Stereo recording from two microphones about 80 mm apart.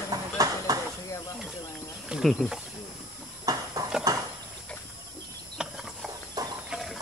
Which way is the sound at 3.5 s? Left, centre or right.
Right.